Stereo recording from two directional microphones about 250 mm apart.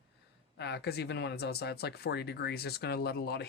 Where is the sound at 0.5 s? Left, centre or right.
Left.